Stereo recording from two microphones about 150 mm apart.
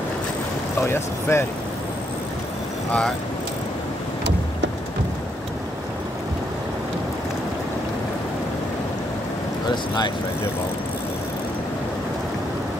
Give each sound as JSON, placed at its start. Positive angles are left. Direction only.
{"t": 0.8, "sound": "speech", "side_deg": 15}